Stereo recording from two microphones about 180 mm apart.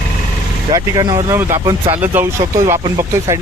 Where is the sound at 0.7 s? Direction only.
20° right (ahead or behind).